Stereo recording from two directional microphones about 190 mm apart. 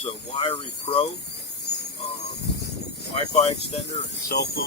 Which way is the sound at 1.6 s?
60° left (ahead or behind).